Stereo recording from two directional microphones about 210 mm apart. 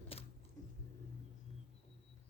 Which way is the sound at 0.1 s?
30° left (ahead or behind).